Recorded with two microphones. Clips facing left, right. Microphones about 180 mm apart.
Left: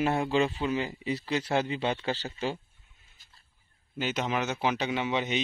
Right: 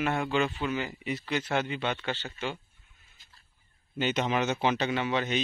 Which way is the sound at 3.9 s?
5° left (ahead or behind).